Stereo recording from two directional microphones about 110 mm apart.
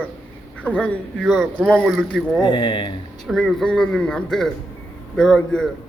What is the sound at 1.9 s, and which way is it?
Speech, 5° right (ahead or behind).